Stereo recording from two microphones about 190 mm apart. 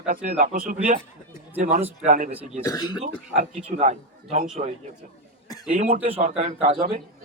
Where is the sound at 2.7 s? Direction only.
20° left (ahead or behind).